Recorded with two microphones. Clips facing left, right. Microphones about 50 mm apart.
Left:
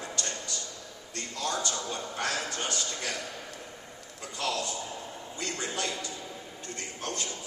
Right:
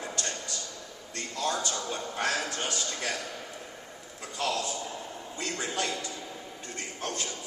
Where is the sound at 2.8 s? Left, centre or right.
Right.